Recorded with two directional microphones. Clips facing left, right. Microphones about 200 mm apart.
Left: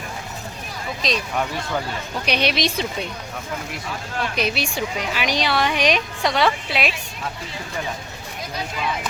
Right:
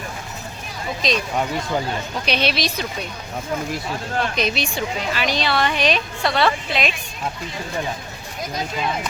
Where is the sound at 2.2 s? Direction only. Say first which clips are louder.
Left 1 dB; 15° left (ahead or behind).